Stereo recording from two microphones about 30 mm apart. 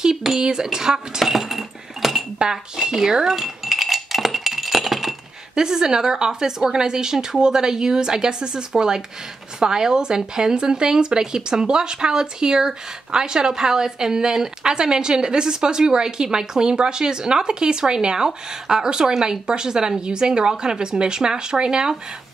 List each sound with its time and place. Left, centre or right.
0.4 s speech: right
1.2 s chink: centre
2.5 s speech: centre
3.3 s a sound: centre
5.5 s speech: right